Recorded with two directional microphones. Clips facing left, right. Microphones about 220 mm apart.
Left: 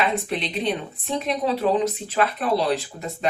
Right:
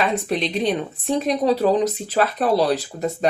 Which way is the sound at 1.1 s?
40° right (ahead or behind).